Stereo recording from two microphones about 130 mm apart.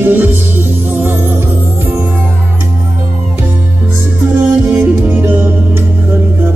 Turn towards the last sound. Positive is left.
turn(degrees=-15)  # may be behind; listen again after turning